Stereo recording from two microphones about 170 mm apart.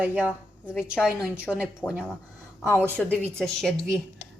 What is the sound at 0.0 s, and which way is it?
Speech, 10° right (ahead or behind).